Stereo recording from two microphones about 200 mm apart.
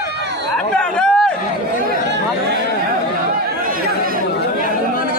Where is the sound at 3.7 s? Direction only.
45° right (ahead or behind).